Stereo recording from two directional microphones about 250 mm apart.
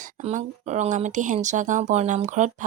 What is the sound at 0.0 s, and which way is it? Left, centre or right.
Speech, right.